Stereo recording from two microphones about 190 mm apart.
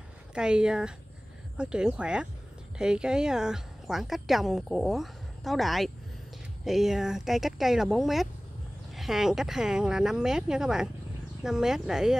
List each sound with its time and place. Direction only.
0.3 s a woman's voice: 5° right (ahead or behind)